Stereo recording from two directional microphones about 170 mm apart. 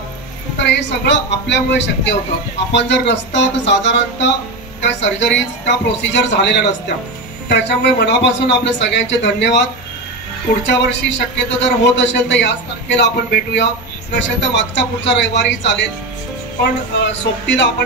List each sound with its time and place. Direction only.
0.6 s a man's voice: 90° left
10.7 s a man's voice: 90° left
17.0 s a man's voice: 90° left